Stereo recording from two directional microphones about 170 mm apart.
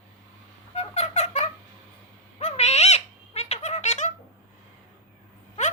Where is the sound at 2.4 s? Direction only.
40° left (ahead or behind).